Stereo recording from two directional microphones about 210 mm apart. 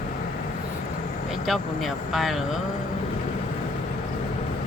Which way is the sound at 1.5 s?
Centre (ahead or behind).